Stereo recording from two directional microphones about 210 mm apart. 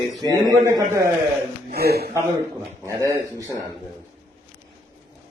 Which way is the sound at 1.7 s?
50° right (ahead or behind).